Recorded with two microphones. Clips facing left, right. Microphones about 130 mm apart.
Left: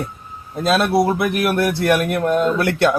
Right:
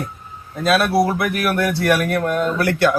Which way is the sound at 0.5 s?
25° left (ahead or behind).